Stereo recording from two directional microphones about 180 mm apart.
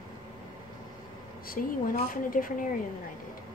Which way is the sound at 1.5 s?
50° left (ahead or behind).